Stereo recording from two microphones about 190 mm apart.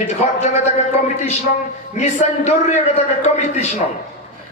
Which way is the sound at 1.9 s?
35° left (ahead or behind).